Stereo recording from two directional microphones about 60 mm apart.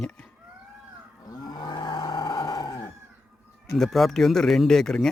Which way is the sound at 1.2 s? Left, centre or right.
Left.